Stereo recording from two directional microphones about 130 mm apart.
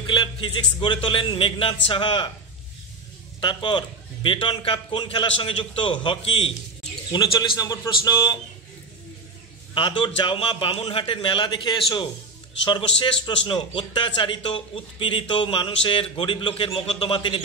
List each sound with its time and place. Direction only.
0.0 s a man's voice: 40° left (ahead or behind)
3.3 s a man's voice: 40° left (ahead or behind)
7.3 s a man's voice: 30° left (ahead or behind)
9.8 s a man's voice: 40° left (ahead or behind)